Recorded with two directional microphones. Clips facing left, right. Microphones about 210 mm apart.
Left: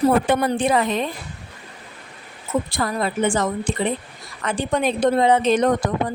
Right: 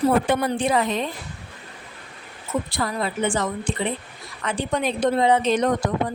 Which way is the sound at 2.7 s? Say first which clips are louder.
Left 3 dB; 45° left (ahead or behind).